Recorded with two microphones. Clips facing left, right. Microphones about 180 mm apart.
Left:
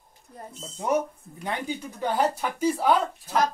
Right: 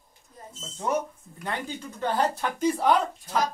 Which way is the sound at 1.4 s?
10° left (ahead or behind).